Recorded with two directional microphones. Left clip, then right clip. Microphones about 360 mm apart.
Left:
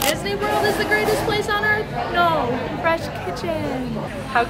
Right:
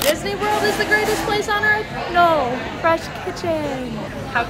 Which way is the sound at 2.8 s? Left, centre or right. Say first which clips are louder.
Right 3 dB; centre.